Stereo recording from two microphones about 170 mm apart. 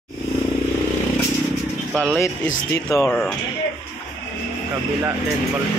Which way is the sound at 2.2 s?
15° left (ahead or behind).